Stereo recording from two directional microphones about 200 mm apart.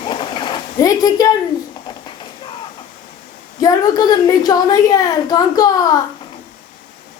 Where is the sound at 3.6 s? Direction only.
20° left (ahead or behind).